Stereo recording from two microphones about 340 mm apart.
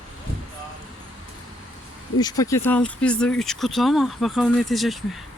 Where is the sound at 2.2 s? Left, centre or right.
Centre.